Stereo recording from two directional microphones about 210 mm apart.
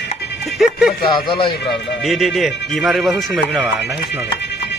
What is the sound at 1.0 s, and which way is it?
Speech, 20° left (ahead or behind).